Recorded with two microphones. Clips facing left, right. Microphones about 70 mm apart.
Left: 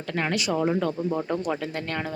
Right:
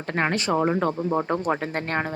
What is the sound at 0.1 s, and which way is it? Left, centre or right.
Speech, right.